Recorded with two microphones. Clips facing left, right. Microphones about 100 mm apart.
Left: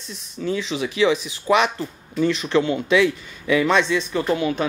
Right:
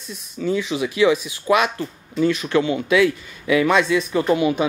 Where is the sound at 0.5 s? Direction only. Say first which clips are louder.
Right 2 dB; 5° right (ahead or behind).